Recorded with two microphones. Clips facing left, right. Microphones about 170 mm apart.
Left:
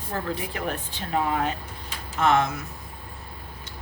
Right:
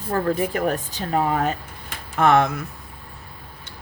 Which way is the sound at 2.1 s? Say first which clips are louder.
Right 4 dB; 55° right (ahead or behind).